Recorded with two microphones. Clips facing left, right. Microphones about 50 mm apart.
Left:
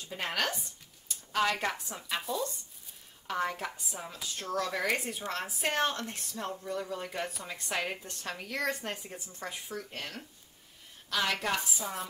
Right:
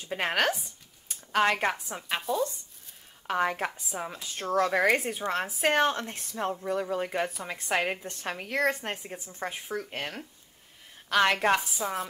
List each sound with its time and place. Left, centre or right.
0.0 s speech: right
3.3 s speech: right
5.6 s a woman's voice: right
5.9 s a woman's voice: right
11.8 s speech: centre